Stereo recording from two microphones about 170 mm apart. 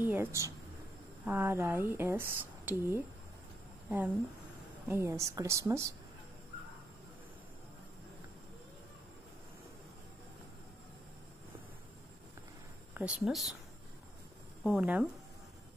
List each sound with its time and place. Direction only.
0.0 s speech: 10° right (ahead or behind)
4.8 s speech: 15° right (ahead or behind)
12.9 s speech: 5° right (ahead or behind)
14.6 s speech: centre (ahead or behind)